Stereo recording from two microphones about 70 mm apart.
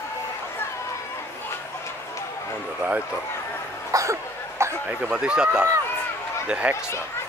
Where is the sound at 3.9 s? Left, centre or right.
Right.